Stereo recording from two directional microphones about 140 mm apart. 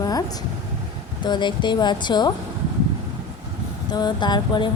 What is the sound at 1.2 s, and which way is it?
Speech, 35° left (ahead or behind).